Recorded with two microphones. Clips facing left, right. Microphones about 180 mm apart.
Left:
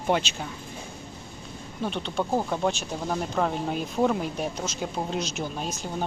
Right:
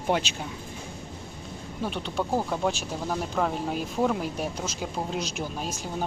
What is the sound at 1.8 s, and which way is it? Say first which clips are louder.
Speech: left 1 dB; 10° right (ahead or behind).